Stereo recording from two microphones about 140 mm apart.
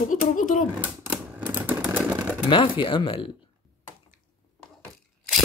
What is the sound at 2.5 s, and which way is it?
Speech, 35° left (ahead or behind).